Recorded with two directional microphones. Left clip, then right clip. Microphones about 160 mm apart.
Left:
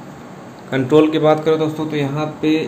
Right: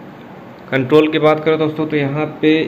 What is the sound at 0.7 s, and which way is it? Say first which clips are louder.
Speech: right 1 dB; 15° left (ahead or behind).